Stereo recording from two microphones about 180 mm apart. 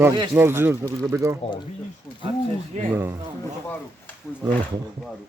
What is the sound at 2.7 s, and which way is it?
Speech, 40° right (ahead or behind).